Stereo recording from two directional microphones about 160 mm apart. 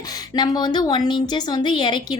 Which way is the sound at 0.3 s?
25° left (ahead or behind).